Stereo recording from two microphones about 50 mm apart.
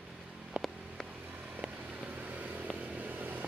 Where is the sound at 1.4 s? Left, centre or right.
Centre.